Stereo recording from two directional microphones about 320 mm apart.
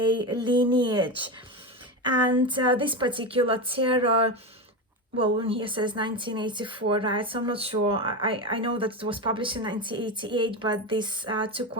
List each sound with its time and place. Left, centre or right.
0.0 s speech: centre
2.5 s speech: centre